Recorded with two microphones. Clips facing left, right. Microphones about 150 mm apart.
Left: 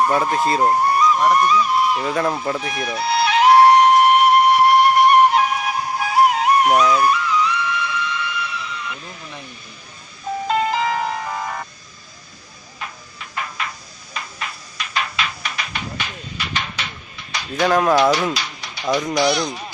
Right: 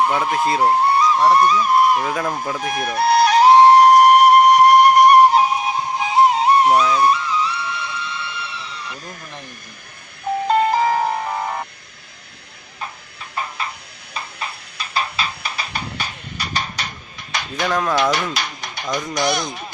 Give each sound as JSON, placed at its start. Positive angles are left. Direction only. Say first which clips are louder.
{"t": 0.2, "sound": "speech", "louder": "even", "side_deg": 0}
{"t": 0.7, "sound": "speech", "louder": "even", "side_deg": -25}
{"t": 2.1, "sound": "speech", "louder": "left 3 dB", "side_deg": 0}
{"t": 2.6, "sound": "music", "louder": "right 4 dB", "side_deg": -50}
{"t": 10.5, "sound": "music", "louder": "right 3 dB", "side_deg": -40}
{"t": 13.4, "sound": "a sound", "louder": "right 1 dB", "side_deg": -30}
{"t": 17.3, "sound": "a sound", "louder": "right 3 dB", "side_deg": -55}
{"t": 17.6, "sound": "speech", "louder": "left 4 dB", "side_deg": 10}
{"t": 18.1, "sound": "speech", "louder": "left 2 dB", "side_deg": -50}